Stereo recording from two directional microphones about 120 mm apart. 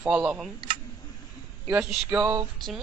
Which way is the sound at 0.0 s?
10° right (ahead or behind).